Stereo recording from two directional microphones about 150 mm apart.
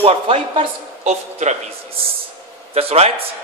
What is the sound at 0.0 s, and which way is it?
A man's voice, 40° right (ahead or behind).